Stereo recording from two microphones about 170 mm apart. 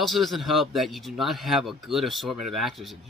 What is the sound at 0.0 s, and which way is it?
Speech, centre (ahead or behind).